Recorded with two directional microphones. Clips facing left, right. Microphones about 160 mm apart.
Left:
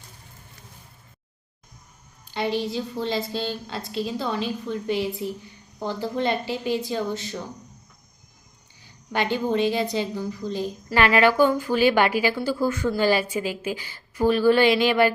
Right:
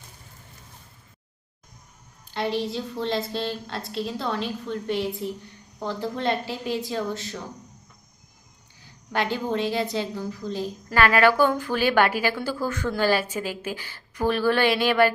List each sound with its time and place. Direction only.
2.2 s a woman's voice: centre (ahead or behind)
8.8 s a woman's voice: centre (ahead or behind)
11.2 s a woman's voice: 15° left (ahead or behind)
13.4 s speech: 45° right (ahead or behind)
13.7 s a woman's voice: 10° left (ahead or behind)